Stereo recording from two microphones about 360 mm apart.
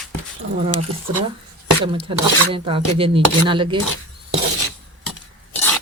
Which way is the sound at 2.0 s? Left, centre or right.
Centre.